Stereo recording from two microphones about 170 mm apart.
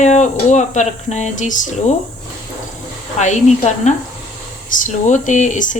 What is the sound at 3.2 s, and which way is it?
Speech, 45° left (ahead or behind).